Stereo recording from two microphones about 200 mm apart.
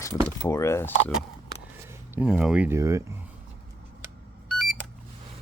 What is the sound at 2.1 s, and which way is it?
Speech, 5° right (ahead or behind).